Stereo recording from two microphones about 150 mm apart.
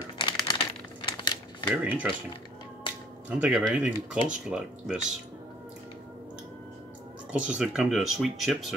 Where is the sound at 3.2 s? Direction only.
10° right (ahead or behind).